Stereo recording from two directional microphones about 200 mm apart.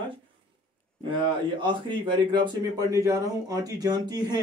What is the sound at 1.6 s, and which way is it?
Speech, 25° right (ahead or behind).